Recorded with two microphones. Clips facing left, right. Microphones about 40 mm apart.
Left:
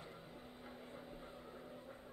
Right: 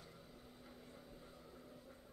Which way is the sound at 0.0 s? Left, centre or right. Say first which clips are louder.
Left 5 dB; left.